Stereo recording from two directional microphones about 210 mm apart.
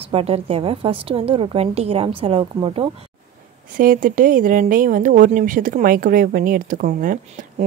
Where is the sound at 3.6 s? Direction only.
40° right (ahead or behind).